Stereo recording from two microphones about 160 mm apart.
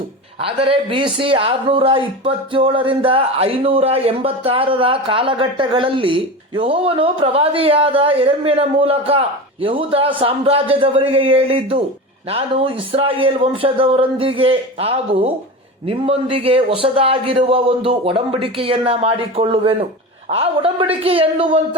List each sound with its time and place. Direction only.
0.4 s speech: 35° right (ahead or behind)